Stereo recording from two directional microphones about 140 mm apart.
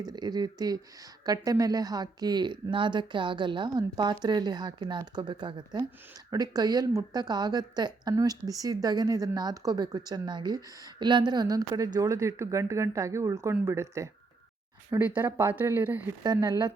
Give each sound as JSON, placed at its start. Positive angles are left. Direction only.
{"t": 0.0, "sound": "a woman's voice", "side_deg": -30}
{"t": 16.2, "sound": "a woman's voice", "side_deg": -30}